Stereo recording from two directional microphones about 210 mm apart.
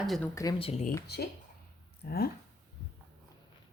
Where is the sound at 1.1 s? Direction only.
50° left (ahead or behind).